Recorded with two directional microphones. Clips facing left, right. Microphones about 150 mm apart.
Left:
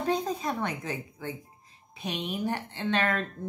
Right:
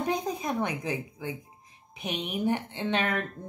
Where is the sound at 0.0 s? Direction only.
15° right (ahead or behind).